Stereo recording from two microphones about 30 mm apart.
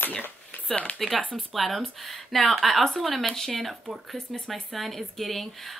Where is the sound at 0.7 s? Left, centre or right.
Left.